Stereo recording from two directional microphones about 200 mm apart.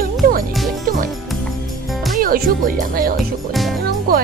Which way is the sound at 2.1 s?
45° right (ahead or behind).